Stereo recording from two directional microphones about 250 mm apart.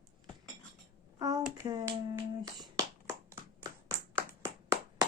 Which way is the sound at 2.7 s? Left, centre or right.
Centre.